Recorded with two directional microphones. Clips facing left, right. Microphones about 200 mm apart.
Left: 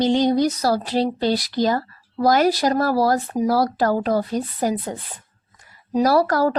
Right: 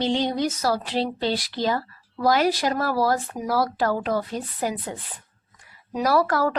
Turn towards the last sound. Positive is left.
turn(degrees=40)  # may be behind; listen again after turning